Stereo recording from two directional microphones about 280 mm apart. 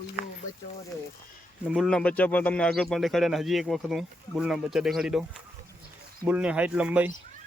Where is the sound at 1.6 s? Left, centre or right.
Centre.